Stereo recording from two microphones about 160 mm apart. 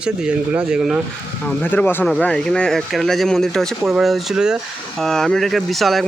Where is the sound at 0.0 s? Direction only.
5° right (ahead or behind).